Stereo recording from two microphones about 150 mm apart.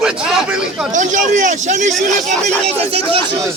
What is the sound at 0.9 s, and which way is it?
A man's voice, 55° right (ahead or behind).